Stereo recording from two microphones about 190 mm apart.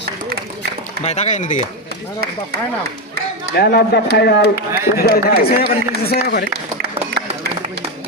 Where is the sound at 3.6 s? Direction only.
55° left (ahead or behind).